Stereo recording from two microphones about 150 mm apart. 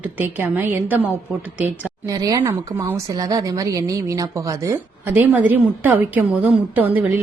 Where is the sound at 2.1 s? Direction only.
25° right (ahead or behind).